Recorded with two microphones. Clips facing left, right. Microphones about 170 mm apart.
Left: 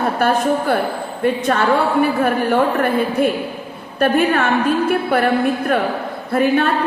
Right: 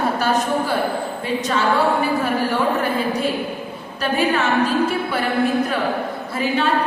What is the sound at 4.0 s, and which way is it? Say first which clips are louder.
A woman's voice: left 4 dB; 55° left (ahead or behind).